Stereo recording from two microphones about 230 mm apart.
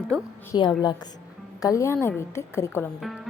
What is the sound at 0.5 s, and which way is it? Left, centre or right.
A woman's voice, centre.